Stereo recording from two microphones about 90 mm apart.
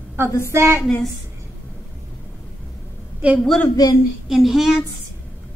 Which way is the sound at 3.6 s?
45° left (ahead or behind).